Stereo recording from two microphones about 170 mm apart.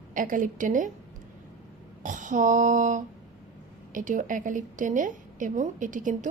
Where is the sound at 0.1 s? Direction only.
50° right (ahead or behind).